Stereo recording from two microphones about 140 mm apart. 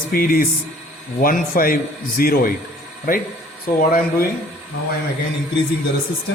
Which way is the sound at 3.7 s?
80° left.